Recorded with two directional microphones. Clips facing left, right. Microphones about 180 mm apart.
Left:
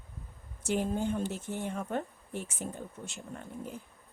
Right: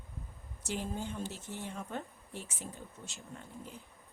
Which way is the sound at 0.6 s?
55° left (ahead or behind).